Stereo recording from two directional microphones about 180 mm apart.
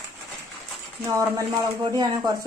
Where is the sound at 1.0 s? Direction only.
20° right (ahead or behind).